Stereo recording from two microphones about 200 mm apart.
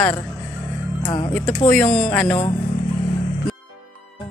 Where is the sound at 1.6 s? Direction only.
5° left (ahead or behind).